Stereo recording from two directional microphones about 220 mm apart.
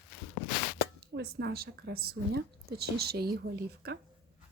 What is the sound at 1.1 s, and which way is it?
Speech, 50° right (ahead or behind).